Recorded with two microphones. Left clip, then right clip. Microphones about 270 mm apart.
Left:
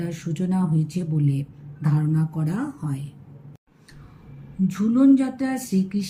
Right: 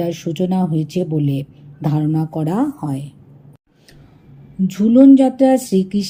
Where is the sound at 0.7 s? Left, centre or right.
Right.